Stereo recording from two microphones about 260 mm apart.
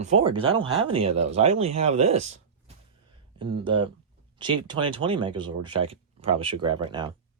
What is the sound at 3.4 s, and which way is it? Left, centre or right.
Speech, centre.